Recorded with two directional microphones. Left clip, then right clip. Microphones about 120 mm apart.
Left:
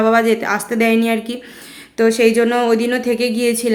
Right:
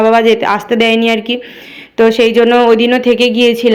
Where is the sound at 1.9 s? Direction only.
25° right (ahead or behind).